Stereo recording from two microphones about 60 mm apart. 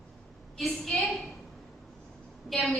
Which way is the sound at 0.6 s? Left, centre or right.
Centre.